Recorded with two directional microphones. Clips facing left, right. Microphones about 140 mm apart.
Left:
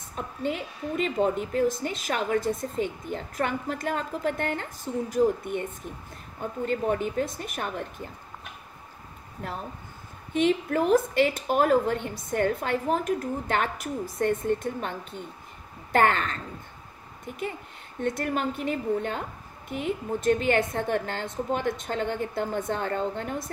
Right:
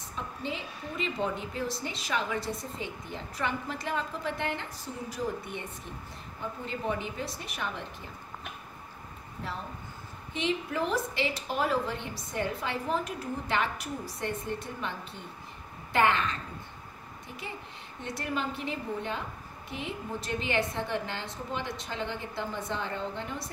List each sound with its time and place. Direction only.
0.1 s a woman's voice: 50° left (ahead or behind)
6.6 s a woman's voice: 50° left (ahead or behind)
10.3 s a woman's voice: 50° left (ahead or behind)
18.0 s a woman's voice: 50° left (ahead or behind)